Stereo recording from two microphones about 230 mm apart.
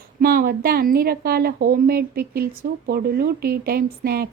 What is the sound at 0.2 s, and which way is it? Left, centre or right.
A woman's voice, right.